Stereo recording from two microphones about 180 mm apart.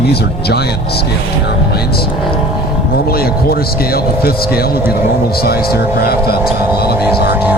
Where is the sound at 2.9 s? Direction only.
55° left (ahead or behind).